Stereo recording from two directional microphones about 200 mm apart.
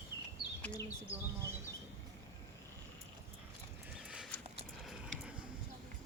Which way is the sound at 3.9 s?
5° right (ahead or behind).